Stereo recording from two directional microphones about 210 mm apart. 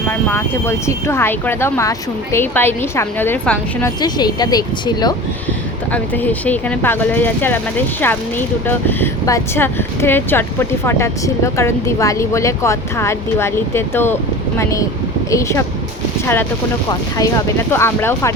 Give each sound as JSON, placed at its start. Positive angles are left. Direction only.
{"t": 0.1, "sound": "speech", "side_deg": 10}
{"t": 4.0, "sound": "speech", "side_deg": 20}
{"t": 5.9, "sound": "speech", "side_deg": 5}